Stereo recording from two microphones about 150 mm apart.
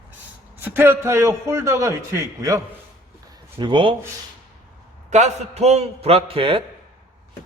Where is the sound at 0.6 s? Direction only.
15° right (ahead or behind).